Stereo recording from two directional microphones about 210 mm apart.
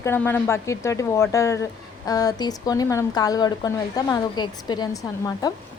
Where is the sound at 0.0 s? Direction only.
10° left (ahead or behind).